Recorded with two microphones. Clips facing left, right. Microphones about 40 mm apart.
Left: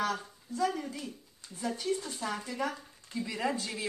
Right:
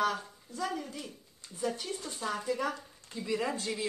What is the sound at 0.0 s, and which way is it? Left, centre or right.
A woman's voice, centre.